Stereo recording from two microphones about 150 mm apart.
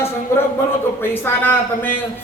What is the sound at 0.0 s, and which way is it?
A man's voice, 15° left (ahead or behind).